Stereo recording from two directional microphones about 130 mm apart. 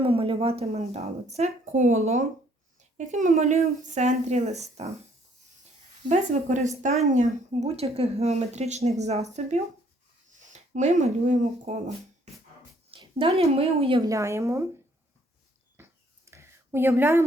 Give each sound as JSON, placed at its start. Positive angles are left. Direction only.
{"t": 0.0, "sound": "a woman's voice", "side_deg": -45}
{"t": 3.1, "sound": "a woman's voice", "side_deg": -75}
{"t": 6.1, "sound": "a woman's voice", "side_deg": -70}
{"t": 12.9, "sound": "a woman's voice", "side_deg": -45}
{"t": 14.0, "sound": "a woman's voice", "side_deg": -25}
{"t": 15.8, "sound": "a sound", "side_deg": -20}